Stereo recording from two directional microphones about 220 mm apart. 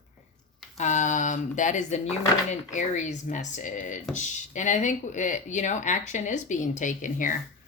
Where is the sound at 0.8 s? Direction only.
35° left (ahead or behind).